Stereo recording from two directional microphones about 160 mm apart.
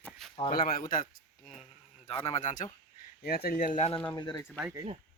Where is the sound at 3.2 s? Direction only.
75° left (ahead or behind); by 3.8 s 60° left (ahead or behind).